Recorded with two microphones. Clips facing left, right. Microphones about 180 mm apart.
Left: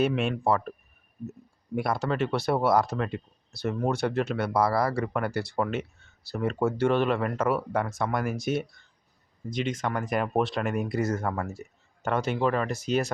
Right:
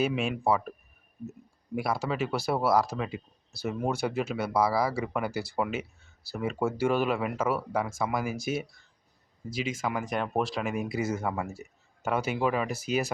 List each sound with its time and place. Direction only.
0.0 s speech: centre (ahead or behind)
1.7 s speech: centre (ahead or behind)